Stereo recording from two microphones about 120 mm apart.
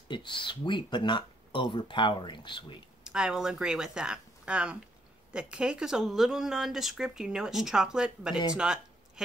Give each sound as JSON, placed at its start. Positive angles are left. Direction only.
{"t": 0.1, "sound": "speech", "side_deg": 40}
{"t": 3.0, "sound": "speech", "side_deg": -5}
{"t": 8.5, "sound": "a sound", "side_deg": -5}